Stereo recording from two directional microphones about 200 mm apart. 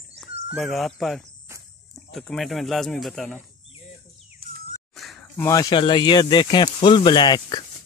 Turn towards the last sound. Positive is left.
turn(degrees=20)  # may be behind; listen again after turning